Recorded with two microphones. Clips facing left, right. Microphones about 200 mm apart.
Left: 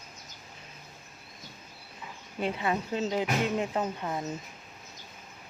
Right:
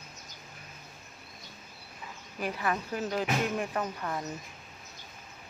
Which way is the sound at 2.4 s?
25° left (ahead or behind).